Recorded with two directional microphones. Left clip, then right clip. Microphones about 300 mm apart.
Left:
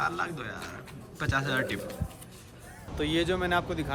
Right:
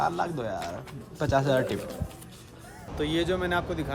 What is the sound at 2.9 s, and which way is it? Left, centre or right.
Speech, centre.